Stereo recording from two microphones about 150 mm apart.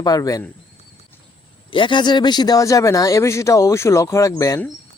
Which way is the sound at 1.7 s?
35° left (ahead or behind).